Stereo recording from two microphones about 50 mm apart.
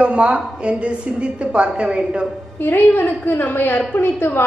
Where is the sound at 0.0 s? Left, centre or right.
Right.